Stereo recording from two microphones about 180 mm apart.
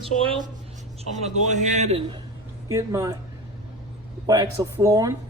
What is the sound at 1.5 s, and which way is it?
Speech, 40° right (ahead or behind).